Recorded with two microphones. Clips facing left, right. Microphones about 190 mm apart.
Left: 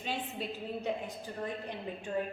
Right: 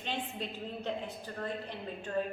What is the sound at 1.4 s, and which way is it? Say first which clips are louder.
Speech: even; 15° left (ahead or behind).